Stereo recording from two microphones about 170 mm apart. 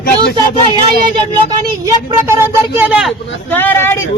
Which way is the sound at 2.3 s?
10° right (ahead or behind).